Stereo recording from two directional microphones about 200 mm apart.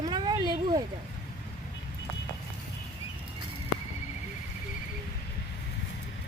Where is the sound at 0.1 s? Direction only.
20° right (ahead or behind).